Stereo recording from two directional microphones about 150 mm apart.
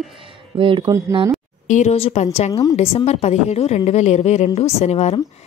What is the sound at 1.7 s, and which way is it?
Speech, 50° left (ahead or behind).